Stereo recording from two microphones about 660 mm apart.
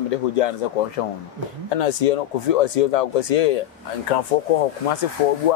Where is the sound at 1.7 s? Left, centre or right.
Left.